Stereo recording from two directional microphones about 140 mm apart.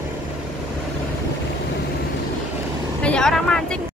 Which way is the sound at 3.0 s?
5° left (ahead or behind).